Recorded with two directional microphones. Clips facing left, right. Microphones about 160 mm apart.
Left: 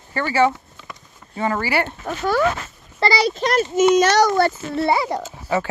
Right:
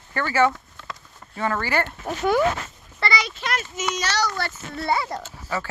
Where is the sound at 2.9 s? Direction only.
35° left (ahead or behind).